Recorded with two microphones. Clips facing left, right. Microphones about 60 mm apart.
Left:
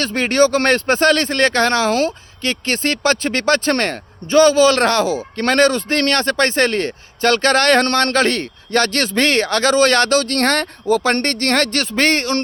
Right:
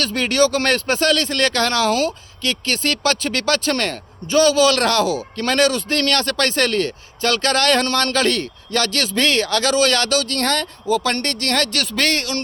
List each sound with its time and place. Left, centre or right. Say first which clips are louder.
0.0 s speech: left 3 dB; left